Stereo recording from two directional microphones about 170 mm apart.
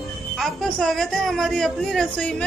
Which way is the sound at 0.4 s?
5° left (ahead or behind).